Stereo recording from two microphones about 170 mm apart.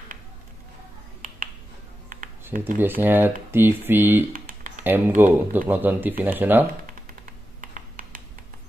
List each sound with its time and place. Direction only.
2.8 s speech: 10° right (ahead or behind)
4.3 s computer keyboard: 55° right (ahead or behind)
4.8 s speech: 10° right (ahead or behind)
7.6 s computer keyboard: 50° right (ahead or behind)